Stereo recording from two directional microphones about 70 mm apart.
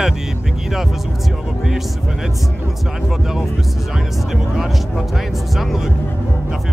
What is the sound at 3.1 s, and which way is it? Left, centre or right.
Speech, centre.